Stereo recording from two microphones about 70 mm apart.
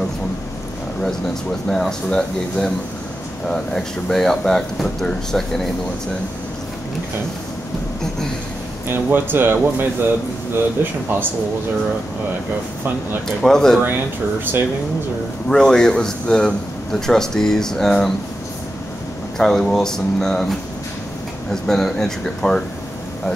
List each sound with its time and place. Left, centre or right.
1.7 s speech: centre
8.8 s speech: right
13.4 s speech: centre
13.7 s speech: right
15.4 s speech: centre
19.3 s speech: centre